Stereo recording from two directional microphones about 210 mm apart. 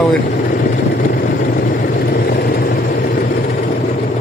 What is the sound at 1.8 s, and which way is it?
Vehicle, 45° left (ahead or behind).